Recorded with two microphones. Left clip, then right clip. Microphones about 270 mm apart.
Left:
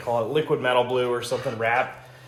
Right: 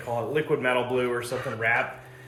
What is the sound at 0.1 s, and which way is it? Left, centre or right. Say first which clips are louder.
Speech: left 3 dB; centre.